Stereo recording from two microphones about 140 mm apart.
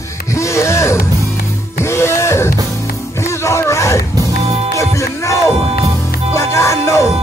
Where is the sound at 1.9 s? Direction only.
20° left (ahead or behind).